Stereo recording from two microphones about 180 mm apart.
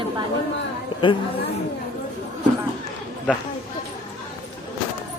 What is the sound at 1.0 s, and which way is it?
Speech, 30° left (ahead or behind).